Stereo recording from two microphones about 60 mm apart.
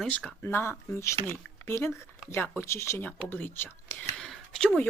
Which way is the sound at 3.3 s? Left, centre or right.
Left.